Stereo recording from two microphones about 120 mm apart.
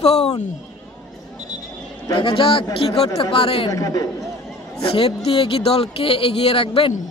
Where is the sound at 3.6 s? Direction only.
30° left (ahead or behind).